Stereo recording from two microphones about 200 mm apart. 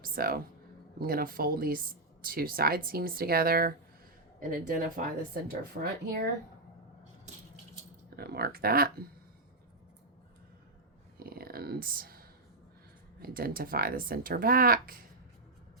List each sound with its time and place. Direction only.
0.0 s speech: 45° right (ahead or behind)
8.1 s speech: 50° right (ahead or behind)
11.2 s a sound: 50° right (ahead or behind)
13.1 s speech: 50° right (ahead or behind)